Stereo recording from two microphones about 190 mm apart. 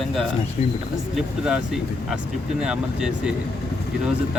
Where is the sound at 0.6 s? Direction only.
35° left (ahead or behind).